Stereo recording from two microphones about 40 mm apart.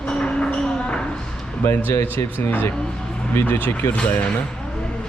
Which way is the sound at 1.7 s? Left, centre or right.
Left.